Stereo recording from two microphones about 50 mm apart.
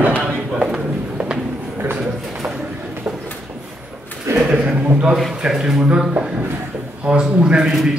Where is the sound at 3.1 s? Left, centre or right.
Right.